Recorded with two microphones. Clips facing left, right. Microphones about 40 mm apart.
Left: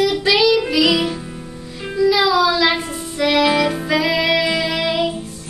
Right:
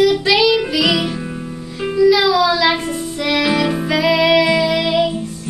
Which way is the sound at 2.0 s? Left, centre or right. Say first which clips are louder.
Right 2 dB; centre.